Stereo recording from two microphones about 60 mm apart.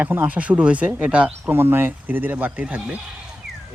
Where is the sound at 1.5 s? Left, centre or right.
Right.